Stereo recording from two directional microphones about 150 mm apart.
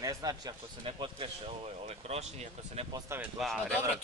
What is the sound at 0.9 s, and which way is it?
Speech, 35° right (ahead or behind).